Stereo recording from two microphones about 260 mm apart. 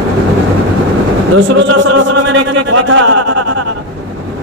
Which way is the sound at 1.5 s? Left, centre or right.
Right.